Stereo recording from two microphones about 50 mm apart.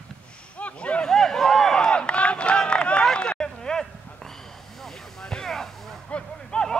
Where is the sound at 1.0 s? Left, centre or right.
Centre.